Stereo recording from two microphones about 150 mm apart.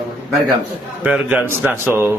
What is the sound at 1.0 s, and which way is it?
A man's voice, 10° right (ahead or behind).